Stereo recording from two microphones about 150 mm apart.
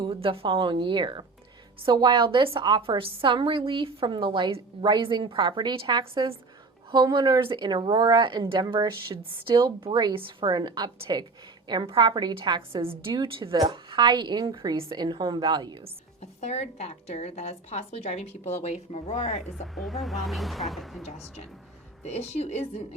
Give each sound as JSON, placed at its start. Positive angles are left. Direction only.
{"t": 0.0, "sound": "a woman's voice", "side_deg": -35}
{"t": 16.2, "sound": "a woman's voice", "side_deg": 45}
{"t": 19.6, "sound": "speech", "side_deg": 0}
{"t": 22.0, "sound": "a woman's voice", "side_deg": 45}